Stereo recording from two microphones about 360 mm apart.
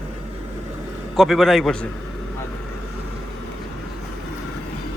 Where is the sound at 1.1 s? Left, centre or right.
Centre.